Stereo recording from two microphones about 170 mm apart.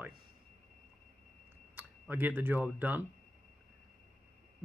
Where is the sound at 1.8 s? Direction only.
10° right (ahead or behind).